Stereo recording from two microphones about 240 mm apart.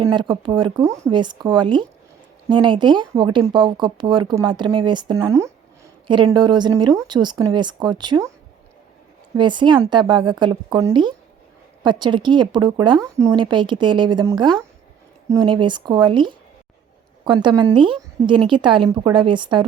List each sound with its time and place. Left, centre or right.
0.0 s speech: centre
9.4 s speech: centre